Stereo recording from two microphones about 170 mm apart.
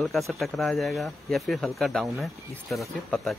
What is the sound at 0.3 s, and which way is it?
Speech, centre (ahead or behind).